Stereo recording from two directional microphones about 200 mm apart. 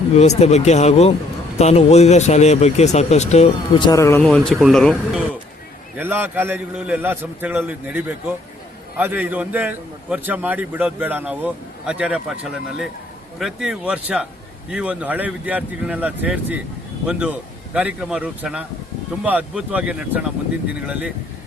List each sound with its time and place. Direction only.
0.2 s speech: 30° left (ahead or behind); by 4.3 s 15° left (ahead or behind)
4.3 s a man's voice: centre (ahead or behind)
6.0 s a man's voice: 10° right (ahead or behind)